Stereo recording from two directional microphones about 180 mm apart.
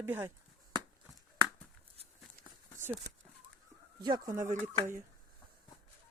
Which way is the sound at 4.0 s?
25° right (ahead or behind).